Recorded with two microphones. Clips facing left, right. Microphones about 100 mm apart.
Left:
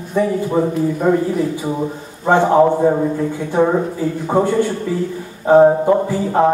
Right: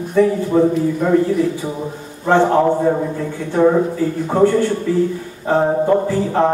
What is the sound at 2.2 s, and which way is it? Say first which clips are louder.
Speech: left 1 dB; 15° left (ahead or behind).